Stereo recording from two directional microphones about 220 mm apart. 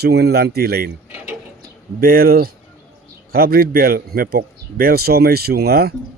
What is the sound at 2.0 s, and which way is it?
Speech, 40° right (ahead or behind).